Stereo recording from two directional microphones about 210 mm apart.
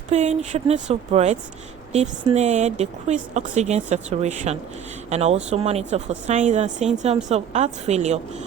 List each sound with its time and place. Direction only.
0.1 s speech: 35° right (ahead or behind)